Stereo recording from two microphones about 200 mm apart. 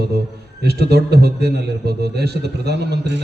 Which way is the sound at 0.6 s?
55° right (ahead or behind).